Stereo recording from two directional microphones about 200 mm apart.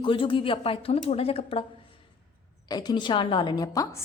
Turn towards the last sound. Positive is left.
turn(degrees=20)  # may be behind; listen again after turning